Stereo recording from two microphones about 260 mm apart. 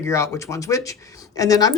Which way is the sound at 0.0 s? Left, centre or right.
Centre.